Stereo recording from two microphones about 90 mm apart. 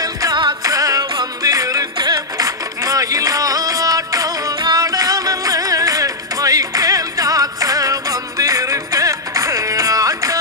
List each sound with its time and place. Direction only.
0.0 s music: 45° right (ahead or behind)